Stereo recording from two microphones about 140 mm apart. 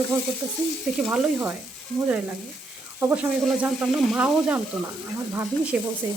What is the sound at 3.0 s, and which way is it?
Speech, 10° right (ahead or behind).